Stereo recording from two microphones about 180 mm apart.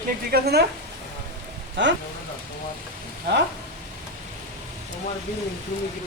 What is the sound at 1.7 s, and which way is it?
Speech, 80° right.